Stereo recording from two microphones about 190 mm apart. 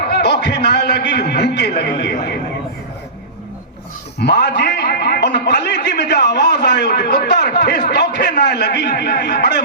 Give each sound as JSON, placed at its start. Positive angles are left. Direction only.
{"t": 0.1, "sound": "a man's voice", "side_deg": 60}
{"t": 4.2, "sound": "a man's voice", "side_deg": 60}